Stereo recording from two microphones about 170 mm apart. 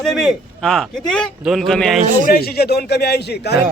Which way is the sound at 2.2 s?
65° left (ahead or behind).